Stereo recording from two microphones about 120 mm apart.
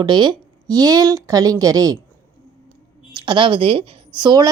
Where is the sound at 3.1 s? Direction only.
45° right (ahead or behind).